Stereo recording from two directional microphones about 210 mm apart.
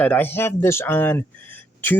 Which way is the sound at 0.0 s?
10° left (ahead or behind).